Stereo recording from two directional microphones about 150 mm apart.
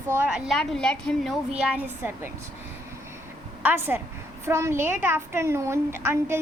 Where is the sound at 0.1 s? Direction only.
10° right (ahead or behind).